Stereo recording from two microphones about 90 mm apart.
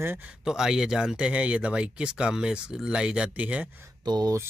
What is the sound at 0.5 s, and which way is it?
Speech, 5° right (ahead or behind).